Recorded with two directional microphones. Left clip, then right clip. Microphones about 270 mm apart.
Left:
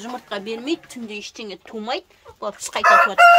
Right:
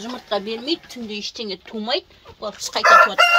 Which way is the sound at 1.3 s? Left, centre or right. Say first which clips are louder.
Right 3 dB; centre.